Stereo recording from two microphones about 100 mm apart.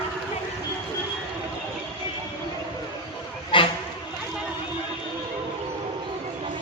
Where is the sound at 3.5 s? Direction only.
55° left (ahead or behind).